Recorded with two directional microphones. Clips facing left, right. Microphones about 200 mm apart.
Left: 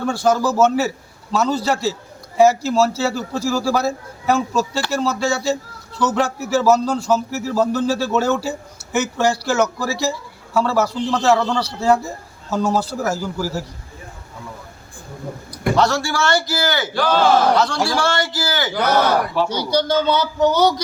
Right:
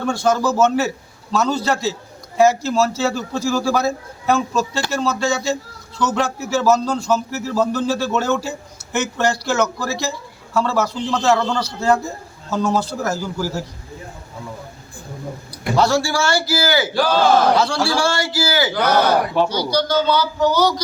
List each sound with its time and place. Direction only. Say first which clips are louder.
0.0 s speech: even; 10° left (ahead or behind)
15.7 s a man's voice: right 2 dB; 10° right (ahead or behind)
18.7 s speech: left 1 dB; 5° left (ahead or behind)
19.5 s a man's voice: left 1 dB; 25° left (ahead or behind)